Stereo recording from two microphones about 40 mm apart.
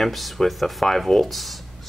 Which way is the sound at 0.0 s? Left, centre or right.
Centre.